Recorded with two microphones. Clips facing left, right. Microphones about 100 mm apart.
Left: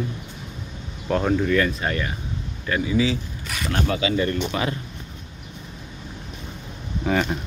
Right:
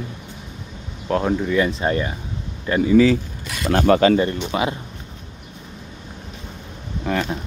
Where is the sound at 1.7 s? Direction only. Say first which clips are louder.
Right 4 dB; 25° right (ahead or behind).